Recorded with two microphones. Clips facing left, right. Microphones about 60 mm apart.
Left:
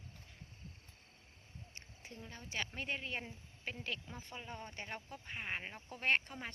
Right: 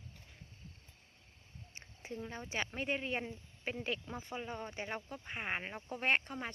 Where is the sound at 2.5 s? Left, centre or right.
Right.